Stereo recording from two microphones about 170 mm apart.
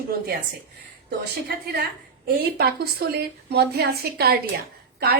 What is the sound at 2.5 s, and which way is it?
A woman's voice, 65° right (ahead or behind).